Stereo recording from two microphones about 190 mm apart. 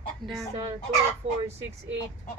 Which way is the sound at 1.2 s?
30° right (ahead or behind).